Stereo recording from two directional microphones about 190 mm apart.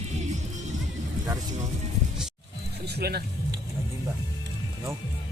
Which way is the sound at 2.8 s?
55° right (ahead or behind).